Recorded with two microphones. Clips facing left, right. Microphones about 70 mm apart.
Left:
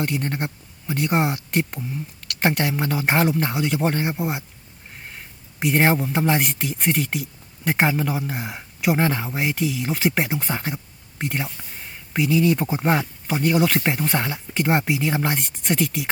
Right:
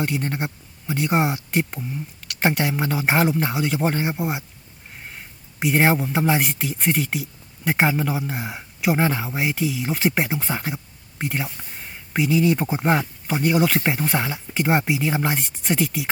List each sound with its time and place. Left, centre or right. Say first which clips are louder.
0.0 s a man's voice: even; centre